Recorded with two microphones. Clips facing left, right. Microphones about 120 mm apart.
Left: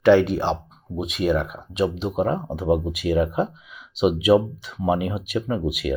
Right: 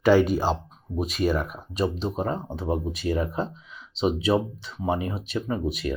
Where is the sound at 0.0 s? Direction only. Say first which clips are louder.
Left 3 dB; 5° right (ahead or behind).